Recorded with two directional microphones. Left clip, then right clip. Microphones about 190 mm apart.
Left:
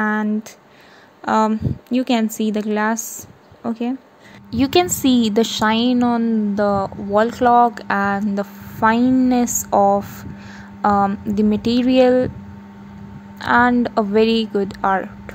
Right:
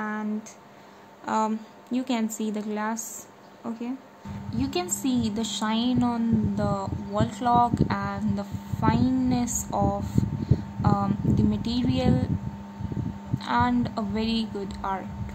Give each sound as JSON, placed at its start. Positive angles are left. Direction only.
{"t": 0.0, "sound": "a sound", "side_deg": 45}
{"t": 1.2, "sound": "a woman's voice", "side_deg": 35}
{"t": 13.4, "sound": "a woman's voice", "side_deg": 35}